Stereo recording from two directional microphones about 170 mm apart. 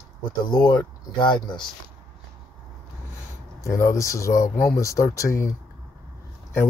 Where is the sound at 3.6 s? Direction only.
15° left (ahead or behind).